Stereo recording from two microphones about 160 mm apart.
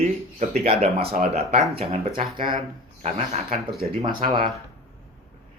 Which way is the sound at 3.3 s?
45° right (ahead or behind).